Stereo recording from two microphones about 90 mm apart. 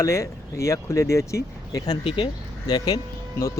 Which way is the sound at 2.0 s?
70° left (ahead or behind).